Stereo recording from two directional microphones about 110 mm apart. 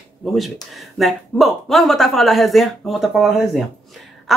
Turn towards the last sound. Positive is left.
turn(degrees=0)  # may be behind; listen again after turning